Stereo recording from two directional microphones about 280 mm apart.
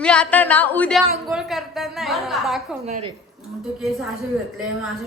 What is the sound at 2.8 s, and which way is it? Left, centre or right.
Speech, right.